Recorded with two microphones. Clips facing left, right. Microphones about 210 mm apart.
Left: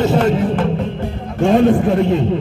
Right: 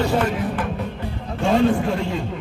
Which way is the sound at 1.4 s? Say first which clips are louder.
Left 6 dB; 55° left (ahead or behind).